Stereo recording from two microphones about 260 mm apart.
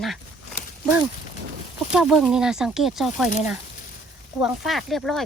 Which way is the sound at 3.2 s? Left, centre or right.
Left.